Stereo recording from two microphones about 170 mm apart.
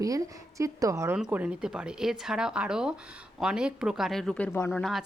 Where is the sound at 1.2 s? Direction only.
5° right (ahead or behind).